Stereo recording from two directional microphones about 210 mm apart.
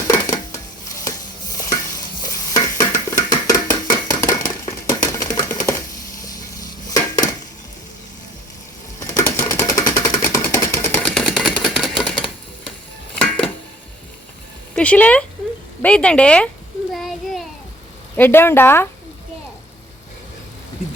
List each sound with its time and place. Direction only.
0.1 s dishes: 15° left (ahead or behind)
2.2 s stir: 15° left (ahead or behind)
6.2 s dishes: 15° left (ahead or behind)
9.0 s sewing machine: 15° left (ahead or behind)
11.6 s a sound: centre (ahead or behind)
13.1 s a sound: 5° left (ahead or behind)
14.8 s a woman's voice: 5° left (ahead or behind)
16.9 s a sound: centre (ahead or behind)
18.2 s speech: 10° left (ahead or behind)